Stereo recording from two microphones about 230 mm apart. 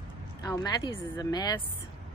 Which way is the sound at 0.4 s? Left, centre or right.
Centre.